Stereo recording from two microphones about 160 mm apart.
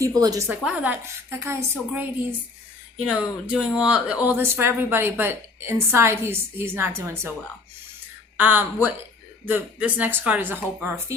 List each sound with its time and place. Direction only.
0.0 s a woman's voice: 25° right (ahead or behind)
0.4 s speech: 5° right (ahead or behind)
3.1 s speech: 5° right (ahead or behind)
8.4 s speech: 10° right (ahead or behind)